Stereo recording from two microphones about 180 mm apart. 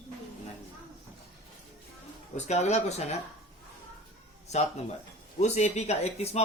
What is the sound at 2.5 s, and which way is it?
Speech, 40° left (ahead or behind).